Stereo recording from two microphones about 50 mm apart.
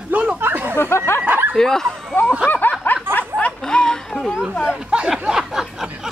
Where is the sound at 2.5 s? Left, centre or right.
Left.